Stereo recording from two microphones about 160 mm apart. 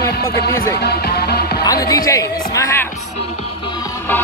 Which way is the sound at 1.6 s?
25° left (ahead or behind).